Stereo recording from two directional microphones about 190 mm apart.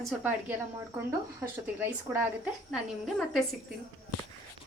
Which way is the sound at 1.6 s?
10° right (ahead or behind).